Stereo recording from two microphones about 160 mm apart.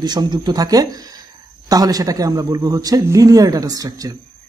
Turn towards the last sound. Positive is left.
turn(degrees=-20)  # may be behind; listen again after turning